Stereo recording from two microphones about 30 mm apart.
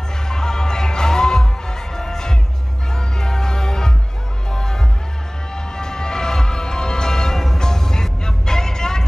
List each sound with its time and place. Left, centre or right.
0.3 s music: left